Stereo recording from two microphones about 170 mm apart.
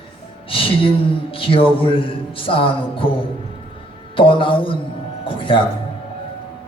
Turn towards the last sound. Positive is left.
turn(degrees=30)  # may be behind; listen again after turning